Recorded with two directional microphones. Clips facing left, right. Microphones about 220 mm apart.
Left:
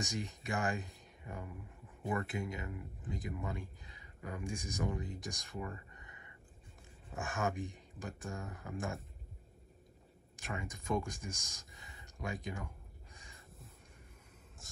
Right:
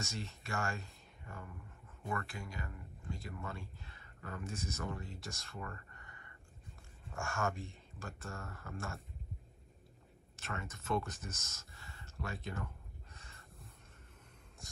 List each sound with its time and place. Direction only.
0.0 s speech: 15° left (ahead or behind)
10.3 s speech: 15° left (ahead or behind)
14.6 s a sound: centre (ahead or behind)